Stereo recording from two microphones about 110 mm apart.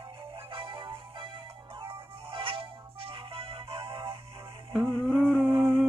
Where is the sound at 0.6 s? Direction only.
50° right (ahead or behind).